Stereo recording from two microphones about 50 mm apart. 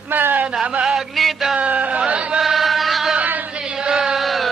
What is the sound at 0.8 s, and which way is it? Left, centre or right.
Music, centre.